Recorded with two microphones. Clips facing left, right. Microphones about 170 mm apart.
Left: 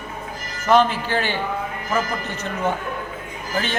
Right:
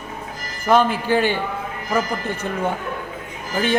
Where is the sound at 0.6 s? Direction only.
10° right (ahead or behind).